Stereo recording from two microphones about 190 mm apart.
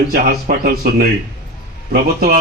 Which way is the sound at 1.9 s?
50° right (ahead or behind).